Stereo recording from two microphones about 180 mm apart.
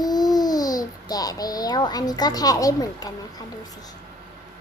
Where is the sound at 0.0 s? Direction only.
20° left (ahead or behind).